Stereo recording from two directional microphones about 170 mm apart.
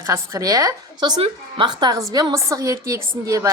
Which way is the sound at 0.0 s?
15° right (ahead or behind).